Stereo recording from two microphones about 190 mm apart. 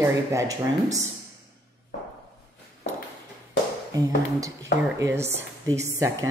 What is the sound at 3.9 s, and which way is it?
A woman's voice, 15° right (ahead or behind).